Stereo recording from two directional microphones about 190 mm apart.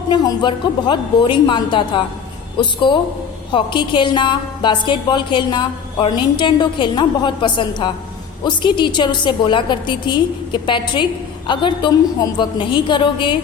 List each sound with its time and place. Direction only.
0.1 s a woman's voice: 25° left (ahead or behind)